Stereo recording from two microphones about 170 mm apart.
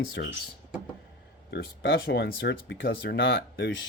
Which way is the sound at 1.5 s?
80° left.